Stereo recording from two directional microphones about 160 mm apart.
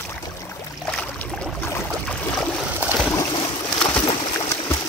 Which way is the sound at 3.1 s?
25° left (ahead or behind).